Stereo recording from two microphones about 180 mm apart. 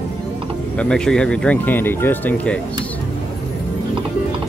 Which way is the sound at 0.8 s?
5° left (ahead or behind).